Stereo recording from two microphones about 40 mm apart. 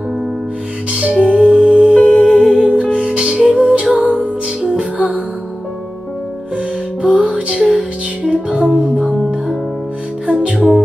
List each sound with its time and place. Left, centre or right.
0.9 s music: right
2.0 s music: left
2.4 s music: right
6.5 s music: right
10.2 s music: right